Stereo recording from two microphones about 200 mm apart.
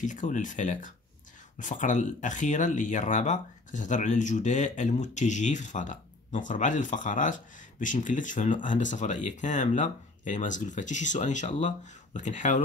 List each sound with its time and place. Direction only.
0.0 s speech: 40° left (ahead or behind)